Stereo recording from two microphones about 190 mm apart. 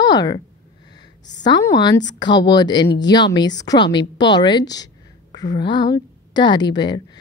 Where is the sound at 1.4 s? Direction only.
20° left (ahead or behind).